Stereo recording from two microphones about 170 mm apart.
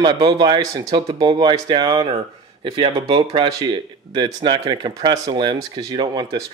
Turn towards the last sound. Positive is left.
turn(degrees=-25)  # may be behind; listen again after turning